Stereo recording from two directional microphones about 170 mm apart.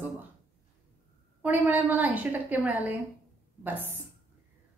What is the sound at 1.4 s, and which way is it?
A woman's voice, 10° right (ahead or behind).